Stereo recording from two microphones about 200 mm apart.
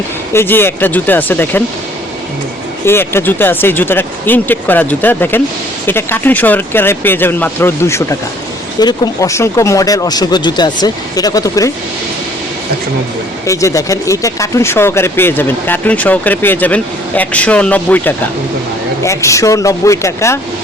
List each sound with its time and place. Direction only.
0.3 s speech: 10° left (ahead or behind)
2.8 s speech: 10° left (ahead or behind)
13.5 s speech: 15° left (ahead or behind)